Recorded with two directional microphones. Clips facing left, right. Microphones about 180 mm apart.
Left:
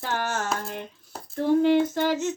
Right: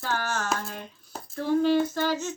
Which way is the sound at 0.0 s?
20° left (ahead or behind).